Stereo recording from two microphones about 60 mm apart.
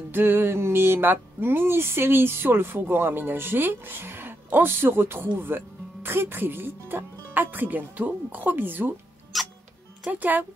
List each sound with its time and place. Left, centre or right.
0.1 s a sound: right
9.3 s music: centre
10.0 s speech: right